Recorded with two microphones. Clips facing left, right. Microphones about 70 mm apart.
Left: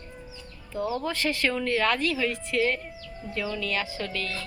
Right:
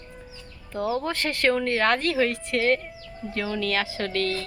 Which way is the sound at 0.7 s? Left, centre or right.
Right.